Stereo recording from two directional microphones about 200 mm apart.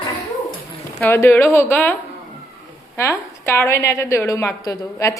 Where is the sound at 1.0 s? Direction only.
10° left (ahead or behind).